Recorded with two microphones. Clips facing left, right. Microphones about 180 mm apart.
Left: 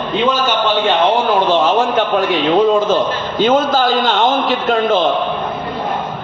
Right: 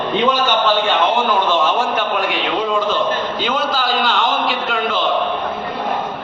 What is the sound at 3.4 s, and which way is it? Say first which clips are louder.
A man's voice: left 11 dB; 45° left (ahead or behind).